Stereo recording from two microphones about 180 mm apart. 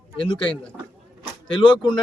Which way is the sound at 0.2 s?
30° left (ahead or behind).